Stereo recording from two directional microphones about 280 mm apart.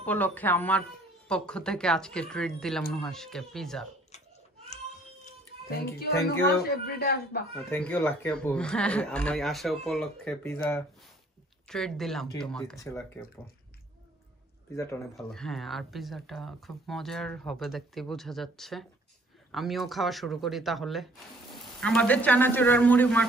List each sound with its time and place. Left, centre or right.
0.0 s speech: centre
4.1 s babbling: left
6.7 s speech: left
7.7 s speech: centre
14.8 s speech: centre